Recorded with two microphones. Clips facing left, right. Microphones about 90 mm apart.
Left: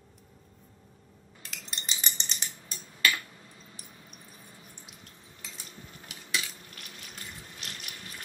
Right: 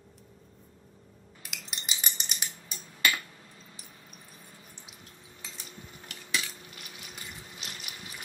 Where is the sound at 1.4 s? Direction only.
10° right (ahead or behind).